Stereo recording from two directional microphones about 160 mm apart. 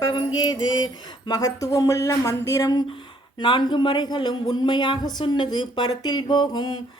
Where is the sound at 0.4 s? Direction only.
25° left (ahead or behind).